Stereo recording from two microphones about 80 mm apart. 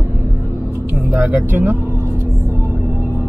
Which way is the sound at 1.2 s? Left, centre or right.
Right.